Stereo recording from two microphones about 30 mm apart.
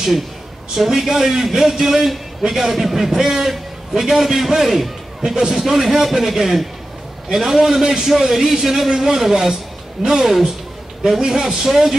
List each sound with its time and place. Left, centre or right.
0.7 s a man's voice: centre
11.1 s a man's voice: centre